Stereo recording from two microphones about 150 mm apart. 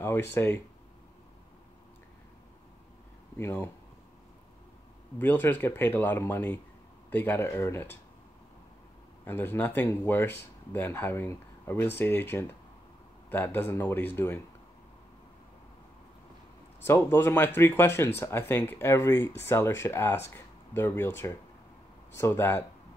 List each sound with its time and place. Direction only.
0.0 s speech: 15° left (ahead or behind)
3.3 s speech: 15° left (ahead or behind)
5.2 s speech: 15° left (ahead or behind)
9.2 s speech: 15° left (ahead or behind)
16.8 s speech: 15° left (ahead or behind)